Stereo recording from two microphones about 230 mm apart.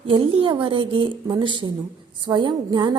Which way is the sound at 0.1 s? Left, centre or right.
Right.